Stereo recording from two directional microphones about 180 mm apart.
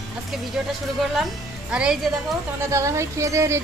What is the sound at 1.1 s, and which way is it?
Speech, 5° right (ahead or behind).